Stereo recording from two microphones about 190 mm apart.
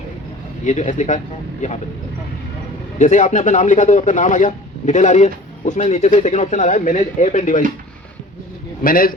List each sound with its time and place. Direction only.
0.6 s a man's voice: 40° left (ahead or behind)
3.0 s a man's voice: 40° left (ahead or behind)
8.8 s a man's voice: 50° left (ahead or behind)